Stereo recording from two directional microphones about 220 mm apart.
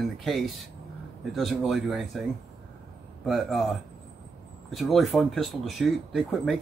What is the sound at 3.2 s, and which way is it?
Speech, centre (ahead or behind).